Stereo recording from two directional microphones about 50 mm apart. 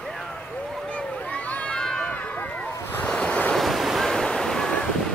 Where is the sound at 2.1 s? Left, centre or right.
Left.